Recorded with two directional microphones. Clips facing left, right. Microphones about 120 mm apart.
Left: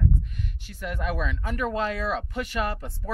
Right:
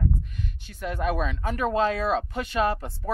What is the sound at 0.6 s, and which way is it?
Speech, 30° right (ahead or behind).